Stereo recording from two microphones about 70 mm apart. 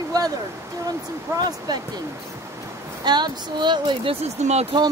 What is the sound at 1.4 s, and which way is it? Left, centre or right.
Speech, right.